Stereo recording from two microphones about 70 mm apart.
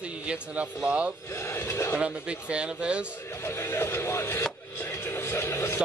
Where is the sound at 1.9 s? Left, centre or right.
Centre.